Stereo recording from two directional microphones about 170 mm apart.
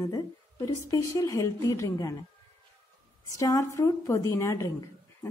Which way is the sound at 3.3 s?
20° left (ahead or behind).